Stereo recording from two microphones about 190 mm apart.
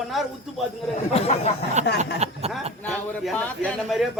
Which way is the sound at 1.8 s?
40° right (ahead or behind).